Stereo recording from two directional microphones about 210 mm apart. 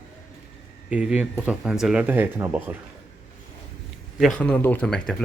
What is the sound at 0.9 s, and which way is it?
Speech, 5° right (ahead or behind).